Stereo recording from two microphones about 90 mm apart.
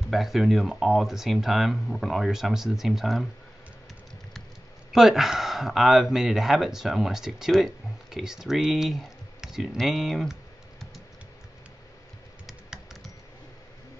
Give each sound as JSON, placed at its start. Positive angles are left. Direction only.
{"t": 0.1, "sound": "speech", "side_deg": 0}
{"t": 4.9, "sound": "speech", "side_deg": -5}
{"t": 12.4, "sound": "typing", "side_deg": -5}